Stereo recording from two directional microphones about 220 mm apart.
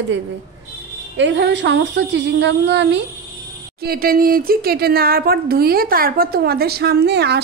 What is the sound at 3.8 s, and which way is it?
Speech, 40° right (ahead or behind).